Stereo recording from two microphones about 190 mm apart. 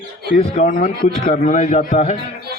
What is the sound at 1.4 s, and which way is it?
Speech, 35° left (ahead or behind).